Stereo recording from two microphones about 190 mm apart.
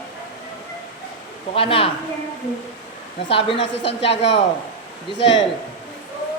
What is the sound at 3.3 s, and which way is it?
Speech, 30° left (ahead or behind).